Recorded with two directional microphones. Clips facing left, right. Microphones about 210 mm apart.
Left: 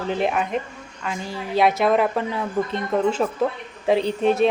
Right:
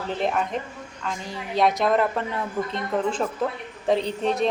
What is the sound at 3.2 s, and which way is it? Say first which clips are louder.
A woman's voice: left 4 dB; 5° left (ahead or behind).